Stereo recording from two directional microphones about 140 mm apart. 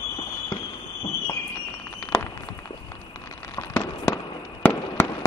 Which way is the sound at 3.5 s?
15° left (ahead or behind).